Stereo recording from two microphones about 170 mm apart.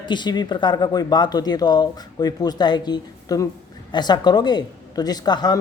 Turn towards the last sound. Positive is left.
turn(degrees=25)  # may be behind; listen again after turning